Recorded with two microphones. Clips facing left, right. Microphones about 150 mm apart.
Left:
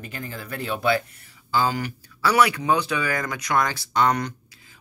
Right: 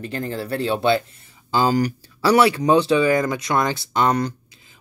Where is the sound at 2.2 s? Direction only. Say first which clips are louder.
Right 4 dB; 30° right (ahead or behind).